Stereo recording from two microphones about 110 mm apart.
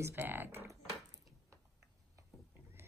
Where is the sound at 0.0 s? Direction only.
20° right (ahead or behind).